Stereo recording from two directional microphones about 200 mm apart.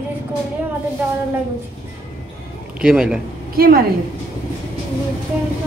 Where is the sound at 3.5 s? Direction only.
50° right (ahead or behind).